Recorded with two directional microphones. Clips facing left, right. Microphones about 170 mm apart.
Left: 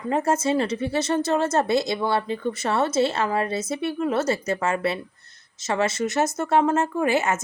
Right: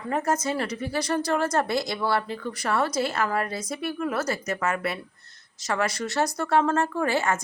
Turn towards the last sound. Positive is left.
turn(degrees=20)  # may be behind; listen again after turning